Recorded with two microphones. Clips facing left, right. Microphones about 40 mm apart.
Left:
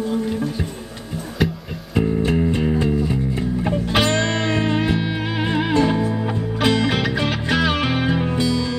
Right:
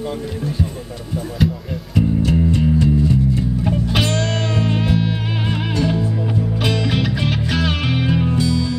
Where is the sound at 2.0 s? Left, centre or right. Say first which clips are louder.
Right 1 dB; left.